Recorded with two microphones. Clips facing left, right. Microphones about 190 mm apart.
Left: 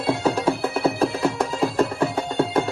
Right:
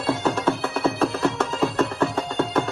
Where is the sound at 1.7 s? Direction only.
30° left (ahead or behind).